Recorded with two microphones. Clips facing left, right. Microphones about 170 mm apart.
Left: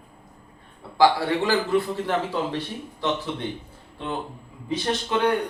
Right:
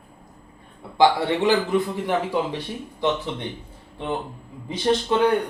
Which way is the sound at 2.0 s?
15° right (ahead or behind).